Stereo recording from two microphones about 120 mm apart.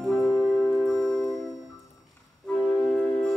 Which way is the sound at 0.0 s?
Centre (ahead or behind).